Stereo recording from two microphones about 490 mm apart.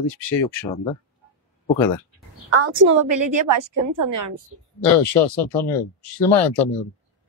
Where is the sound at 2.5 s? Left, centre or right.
Right.